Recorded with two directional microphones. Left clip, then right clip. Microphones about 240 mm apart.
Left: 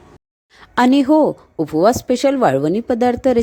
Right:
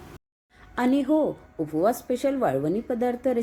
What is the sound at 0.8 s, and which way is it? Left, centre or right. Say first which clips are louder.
Speech: left 10 dB; left.